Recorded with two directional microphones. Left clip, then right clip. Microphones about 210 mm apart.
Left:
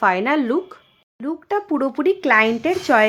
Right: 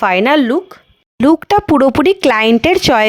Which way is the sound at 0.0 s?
40° right (ahead or behind).